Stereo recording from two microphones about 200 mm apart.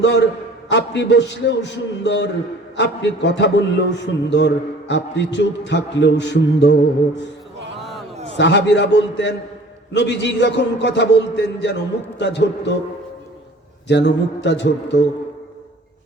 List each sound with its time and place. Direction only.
0.0 s a man's voice: 60° left (ahead or behind)
7.8 s a sound: centre (ahead or behind)
8.4 s a man's voice: 60° left (ahead or behind)
13.8 s a man's voice: 60° left (ahead or behind)